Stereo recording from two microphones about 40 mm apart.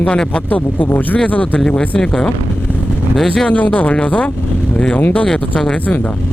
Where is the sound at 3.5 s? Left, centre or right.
Left.